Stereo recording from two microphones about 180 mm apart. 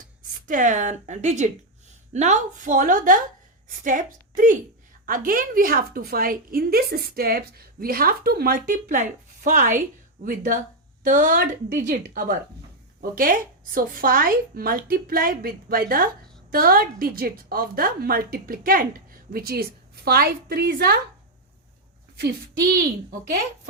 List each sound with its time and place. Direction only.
0.4 s a woman's voice: 45° right (ahead or behind); by 21.0 s 60° right (ahead or behind)